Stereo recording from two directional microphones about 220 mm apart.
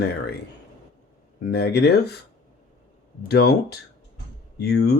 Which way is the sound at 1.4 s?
45° left (ahead or behind).